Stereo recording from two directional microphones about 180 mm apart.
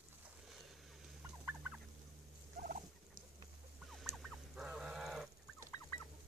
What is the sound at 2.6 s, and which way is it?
Fowl, 50° right (ahead or behind).